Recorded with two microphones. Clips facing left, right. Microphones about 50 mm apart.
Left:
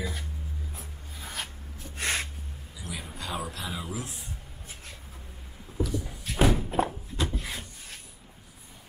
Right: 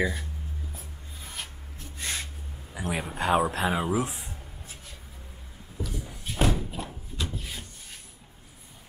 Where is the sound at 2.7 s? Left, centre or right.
Right.